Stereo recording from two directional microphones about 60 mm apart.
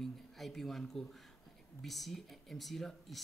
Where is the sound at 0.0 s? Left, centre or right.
Centre.